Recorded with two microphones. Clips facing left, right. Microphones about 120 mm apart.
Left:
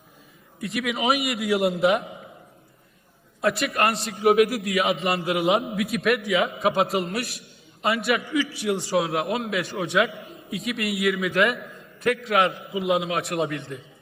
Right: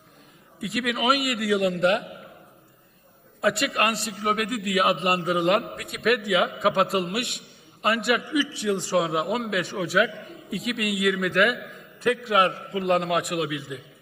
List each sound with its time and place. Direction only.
0.6 s a man's voice: centre (ahead or behind)
3.4 s a man's voice: centre (ahead or behind)
8.2 s a man's voice: 15° right (ahead or behind)
8.5 s a man's voice: 10° left (ahead or behind)
12.3 s a man's voice: 25° right (ahead or behind)
12.6 s a man's voice: 5° left (ahead or behind)